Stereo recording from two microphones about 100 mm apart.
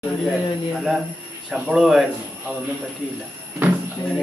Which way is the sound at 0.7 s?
5° right (ahead or behind).